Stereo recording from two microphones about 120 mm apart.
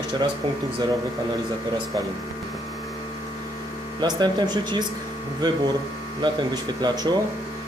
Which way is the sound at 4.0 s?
35° right (ahead or behind).